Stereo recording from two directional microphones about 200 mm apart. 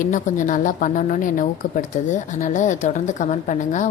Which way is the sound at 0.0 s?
40° left (ahead or behind).